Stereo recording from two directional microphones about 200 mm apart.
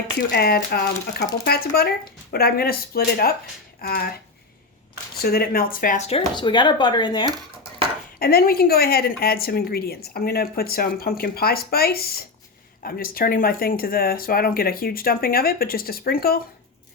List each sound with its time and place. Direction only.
0.3 s speech: 50° left (ahead or behind)
5.2 s speech: 50° left (ahead or behind); by 7.3 s 20° left (ahead or behind)
8.2 s speech: 50° left (ahead or behind)